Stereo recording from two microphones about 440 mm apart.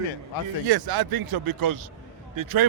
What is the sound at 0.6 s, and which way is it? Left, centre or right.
Speech, right.